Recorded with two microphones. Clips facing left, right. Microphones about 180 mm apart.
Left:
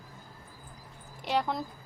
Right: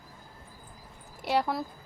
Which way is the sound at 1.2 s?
10° right (ahead or behind).